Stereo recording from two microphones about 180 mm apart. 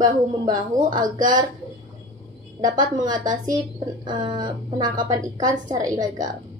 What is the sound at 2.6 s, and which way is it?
A woman's voice, 20° right (ahead or behind).